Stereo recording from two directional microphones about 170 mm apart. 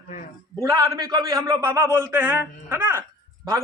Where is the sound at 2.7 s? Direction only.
15° right (ahead or behind).